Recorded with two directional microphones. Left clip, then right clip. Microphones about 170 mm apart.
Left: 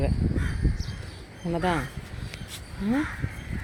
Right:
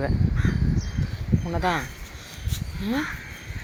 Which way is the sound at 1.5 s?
30° left (ahead or behind).